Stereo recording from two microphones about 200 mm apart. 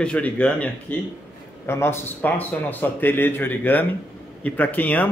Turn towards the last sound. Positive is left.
turn(degrees=10)  # may be behind; listen again after turning